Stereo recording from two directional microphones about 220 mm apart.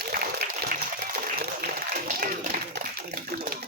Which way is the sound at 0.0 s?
45° right (ahead or behind).